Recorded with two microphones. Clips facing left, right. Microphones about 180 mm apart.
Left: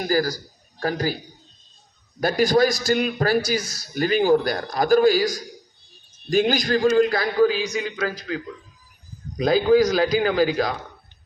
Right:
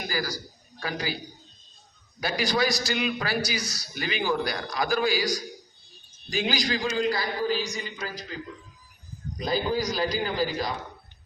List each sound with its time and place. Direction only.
0.1 s a man's voice: 45° left (ahead or behind)
2.2 s a man's voice: 50° left (ahead or behind)
7.4 s a man's voice: 75° left (ahead or behind)
9.4 s speech: 80° left